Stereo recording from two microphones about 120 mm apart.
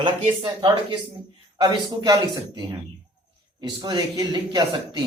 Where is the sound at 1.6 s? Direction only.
35° right (ahead or behind).